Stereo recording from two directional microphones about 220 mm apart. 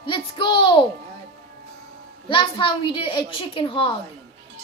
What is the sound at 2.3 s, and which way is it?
A woman's voice, 20° left (ahead or behind).